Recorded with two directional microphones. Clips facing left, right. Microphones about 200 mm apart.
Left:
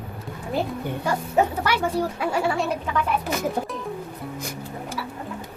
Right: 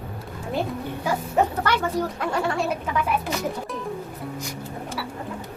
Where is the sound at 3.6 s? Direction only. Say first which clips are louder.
Left 5 dB; 55° left (ahead or behind).